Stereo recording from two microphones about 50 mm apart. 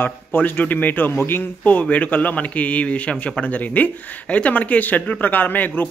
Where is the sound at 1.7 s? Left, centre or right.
Left.